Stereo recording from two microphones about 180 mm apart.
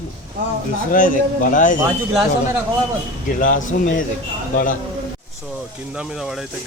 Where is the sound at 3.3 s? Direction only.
50° left (ahead or behind).